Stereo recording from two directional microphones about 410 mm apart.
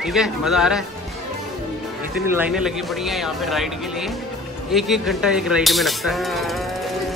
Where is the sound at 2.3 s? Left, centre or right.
Centre.